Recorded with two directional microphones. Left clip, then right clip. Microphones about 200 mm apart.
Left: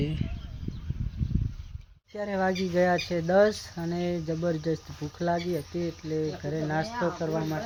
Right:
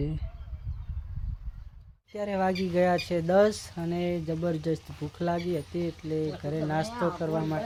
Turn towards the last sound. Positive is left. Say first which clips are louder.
# even
turn(degrees=-10)  # may be behind; listen again after turning